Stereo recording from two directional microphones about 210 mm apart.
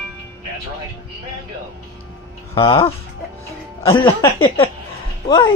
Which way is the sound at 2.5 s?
20° left (ahead or behind).